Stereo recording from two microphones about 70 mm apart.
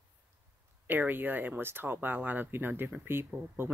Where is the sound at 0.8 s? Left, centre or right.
Right.